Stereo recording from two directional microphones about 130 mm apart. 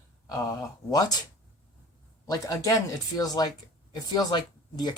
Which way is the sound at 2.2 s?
30° left (ahead or behind).